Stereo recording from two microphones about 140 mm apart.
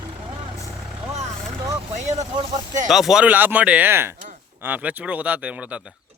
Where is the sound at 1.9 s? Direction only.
55° right (ahead or behind).